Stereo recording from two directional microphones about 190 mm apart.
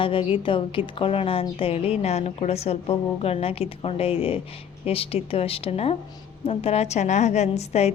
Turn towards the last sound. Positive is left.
turn(degrees=35)  # may be behind; listen again after turning